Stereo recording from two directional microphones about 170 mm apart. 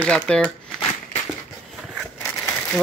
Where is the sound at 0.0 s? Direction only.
10° left (ahead or behind).